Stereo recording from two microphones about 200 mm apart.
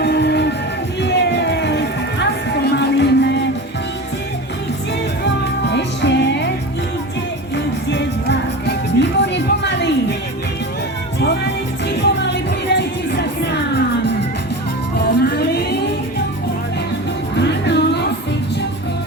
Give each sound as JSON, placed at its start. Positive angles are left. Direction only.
{"t": 0.0, "sound": "music", "side_deg": 55}
{"t": 5.2, "sound": "music", "side_deg": 60}
{"t": 7.5, "sound": "music", "side_deg": 60}
{"t": 11.2, "sound": "music", "side_deg": 60}
{"t": 17.3, "sound": "music", "side_deg": 60}